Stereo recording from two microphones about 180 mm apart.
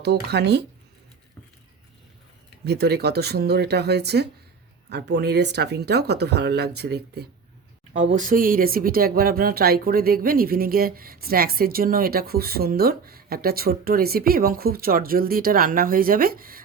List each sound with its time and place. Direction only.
0.0 s speech: 65° right (ahead or behind)
2.6 s speech: 65° right (ahead or behind)
7.9 s speech: 45° right (ahead or behind)